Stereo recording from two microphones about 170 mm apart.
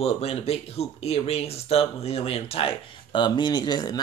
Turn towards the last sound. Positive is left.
turn(degrees=25)  # may be behind; listen again after turning